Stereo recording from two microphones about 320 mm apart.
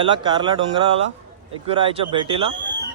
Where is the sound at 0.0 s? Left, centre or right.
Centre.